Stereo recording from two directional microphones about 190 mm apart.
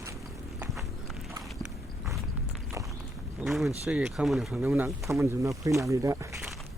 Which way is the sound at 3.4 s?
Centre (ahead or behind).